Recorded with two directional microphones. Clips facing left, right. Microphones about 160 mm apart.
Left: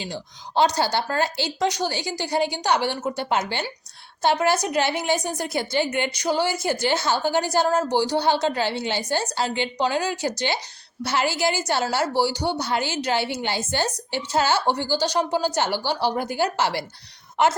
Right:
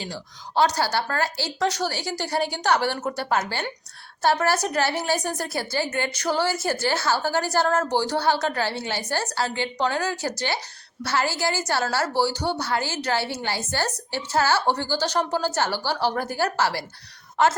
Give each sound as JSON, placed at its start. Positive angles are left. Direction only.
{"t": 0.0, "sound": "a woman's voice", "side_deg": 20}
{"t": 3.2, "sound": "a woman's voice", "side_deg": 20}